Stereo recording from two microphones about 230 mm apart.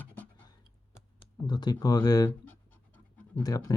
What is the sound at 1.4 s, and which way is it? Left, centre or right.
Speech, centre.